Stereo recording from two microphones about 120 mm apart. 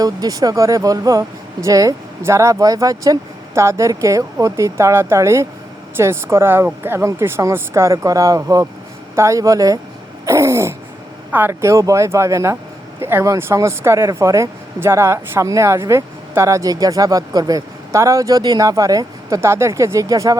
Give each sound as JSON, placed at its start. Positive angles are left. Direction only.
{"t": 0.0, "sound": "speech", "side_deg": -30}
{"t": 10.2, "sound": "throat clearing", "side_deg": -25}
{"t": 11.3, "sound": "speech", "side_deg": -15}